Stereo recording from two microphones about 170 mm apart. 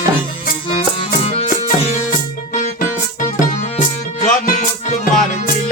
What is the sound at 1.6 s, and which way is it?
Music, 50° left (ahead or behind).